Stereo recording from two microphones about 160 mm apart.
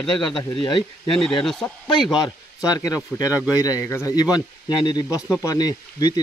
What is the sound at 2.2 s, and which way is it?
Speech, 25° left (ahead or behind).